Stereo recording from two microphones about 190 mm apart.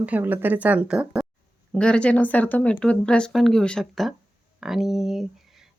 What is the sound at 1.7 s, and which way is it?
Speech, 5° left (ahead or behind).